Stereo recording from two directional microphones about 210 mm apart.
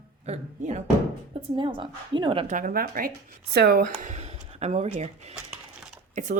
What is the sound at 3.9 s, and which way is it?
Speech, 30° right (ahead or behind).